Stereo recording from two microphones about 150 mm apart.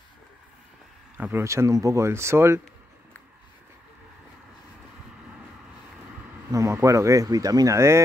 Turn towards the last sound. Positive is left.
turn(degrees=-20)  # may be behind; listen again after turning